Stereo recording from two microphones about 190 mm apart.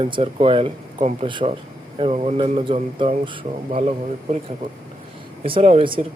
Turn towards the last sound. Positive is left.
turn(degrees=-25)  # may be behind; listen again after turning